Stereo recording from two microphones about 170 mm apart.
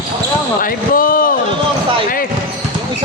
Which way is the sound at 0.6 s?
55° left (ahead or behind).